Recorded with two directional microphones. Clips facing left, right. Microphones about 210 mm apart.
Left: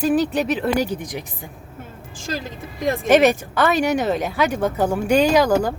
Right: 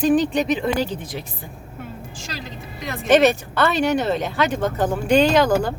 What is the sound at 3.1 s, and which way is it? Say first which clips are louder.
Speech: even; 10° left (ahead or behind).